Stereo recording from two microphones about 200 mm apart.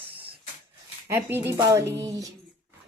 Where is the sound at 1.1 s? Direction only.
10° right (ahead or behind).